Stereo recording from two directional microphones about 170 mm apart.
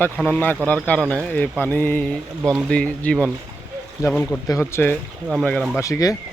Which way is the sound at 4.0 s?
20° left (ahead or behind).